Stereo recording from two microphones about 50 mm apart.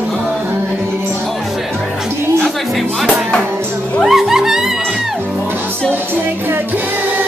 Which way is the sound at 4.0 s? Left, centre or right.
Centre.